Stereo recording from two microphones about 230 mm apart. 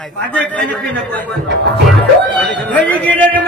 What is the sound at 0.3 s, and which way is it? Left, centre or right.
Speech, centre.